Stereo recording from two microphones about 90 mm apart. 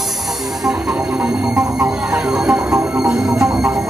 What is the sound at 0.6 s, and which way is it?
Music, 15° right (ahead or behind).